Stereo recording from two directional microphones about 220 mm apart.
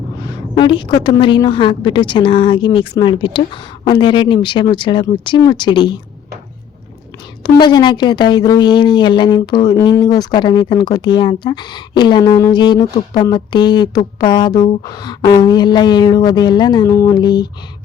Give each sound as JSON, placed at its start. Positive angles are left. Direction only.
{"t": 0.5, "sound": "a woman's voice", "side_deg": 20}
{"t": 7.4, "sound": "a woman's voice", "side_deg": 20}